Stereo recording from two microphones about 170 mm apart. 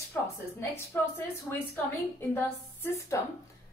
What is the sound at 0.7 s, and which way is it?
A woman's voice, 15° left (ahead or behind).